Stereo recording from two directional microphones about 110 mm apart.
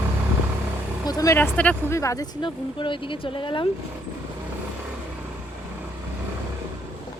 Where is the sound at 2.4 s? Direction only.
50° left (ahead or behind).